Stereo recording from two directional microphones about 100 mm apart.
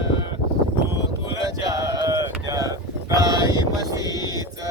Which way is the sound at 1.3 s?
35° right (ahead or behind).